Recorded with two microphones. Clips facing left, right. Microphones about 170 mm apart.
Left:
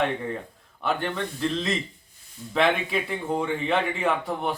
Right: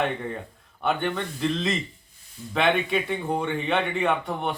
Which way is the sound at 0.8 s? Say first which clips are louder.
Right 1 dB; centre (ahead or behind).